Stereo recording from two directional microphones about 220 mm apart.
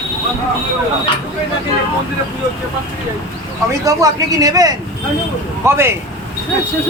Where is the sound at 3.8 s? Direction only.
15° right (ahead or behind).